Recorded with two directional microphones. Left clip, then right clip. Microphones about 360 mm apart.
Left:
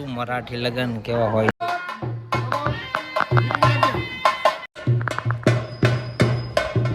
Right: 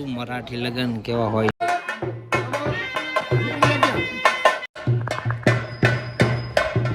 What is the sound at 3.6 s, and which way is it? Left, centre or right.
Music, left.